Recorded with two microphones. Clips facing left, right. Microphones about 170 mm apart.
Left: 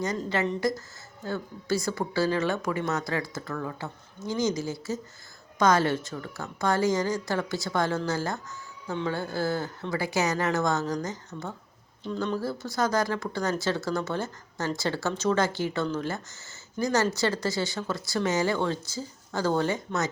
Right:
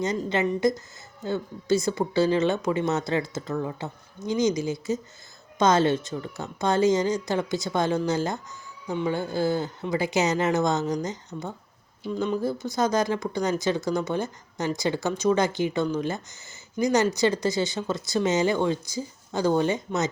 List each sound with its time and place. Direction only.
0.2 s a woman's voice: 15° right (ahead or behind)